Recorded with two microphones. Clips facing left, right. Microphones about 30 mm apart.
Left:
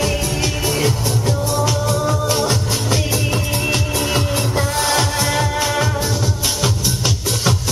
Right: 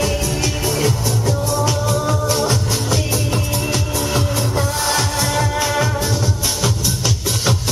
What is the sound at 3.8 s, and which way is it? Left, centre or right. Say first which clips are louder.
Music: left 1 dB; left.